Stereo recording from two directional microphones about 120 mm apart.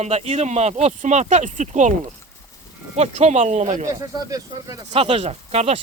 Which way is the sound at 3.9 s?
30° right (ahead or behind).